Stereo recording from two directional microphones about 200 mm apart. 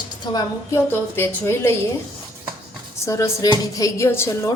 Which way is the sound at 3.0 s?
15° left (ahead or behind).